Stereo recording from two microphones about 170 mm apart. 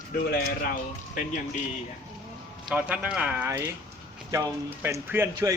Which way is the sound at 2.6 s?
10° right (ahead or behind).